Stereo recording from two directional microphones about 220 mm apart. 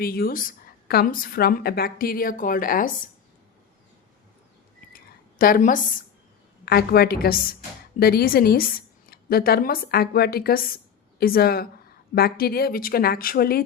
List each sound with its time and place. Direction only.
0.0 s a woman's voice: 45° left (ahead or behind)
4.9 s a sound: 40° left (ahead or behind)
6.7 s a woman's voice: 45° left (ahead or behind)